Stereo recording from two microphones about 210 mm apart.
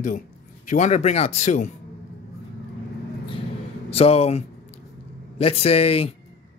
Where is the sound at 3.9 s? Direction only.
30° left (ahead or behind).